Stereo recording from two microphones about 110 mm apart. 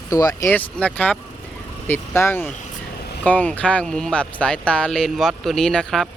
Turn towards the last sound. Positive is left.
turn(degrees=5)  # may be behind; listen again after turning